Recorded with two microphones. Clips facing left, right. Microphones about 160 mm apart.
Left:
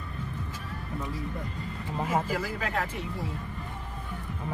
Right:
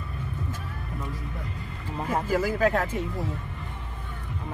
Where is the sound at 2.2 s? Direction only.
45° right (ahead or behind).